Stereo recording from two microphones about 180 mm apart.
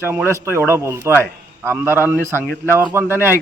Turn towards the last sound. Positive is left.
turn(degrees=-10)  # may be behind; listen again after turning